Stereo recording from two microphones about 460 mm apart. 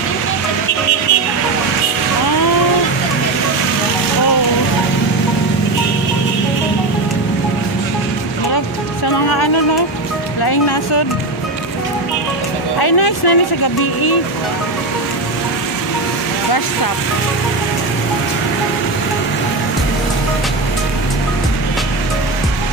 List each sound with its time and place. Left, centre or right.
12.7 s music: left